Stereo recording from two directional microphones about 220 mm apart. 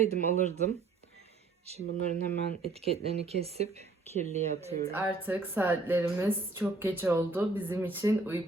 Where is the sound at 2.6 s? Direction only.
30° right (ahead or behind).